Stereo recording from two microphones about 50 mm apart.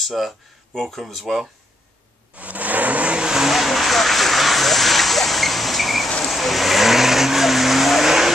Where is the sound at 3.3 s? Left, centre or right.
Centre.